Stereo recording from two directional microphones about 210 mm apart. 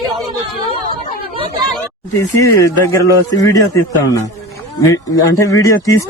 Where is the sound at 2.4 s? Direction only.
15° left (ahead or behind).